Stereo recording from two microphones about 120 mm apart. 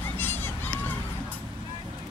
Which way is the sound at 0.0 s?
15° left (ahead or behind).